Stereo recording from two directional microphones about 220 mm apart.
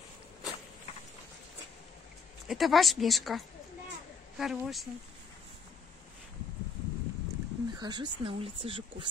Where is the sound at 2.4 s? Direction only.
Centre (ahead or behind).